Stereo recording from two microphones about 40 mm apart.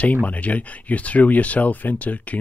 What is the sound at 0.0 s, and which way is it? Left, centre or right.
Speech, left.